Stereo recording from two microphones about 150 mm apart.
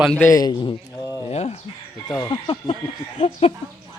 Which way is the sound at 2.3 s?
35° left (ahead or behind).